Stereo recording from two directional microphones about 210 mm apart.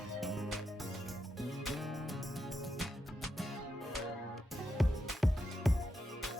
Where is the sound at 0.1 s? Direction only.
Centre (ahead or behind).